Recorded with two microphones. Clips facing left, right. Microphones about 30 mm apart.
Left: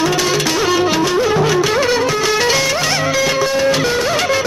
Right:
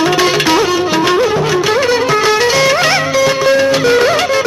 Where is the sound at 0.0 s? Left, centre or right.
Right.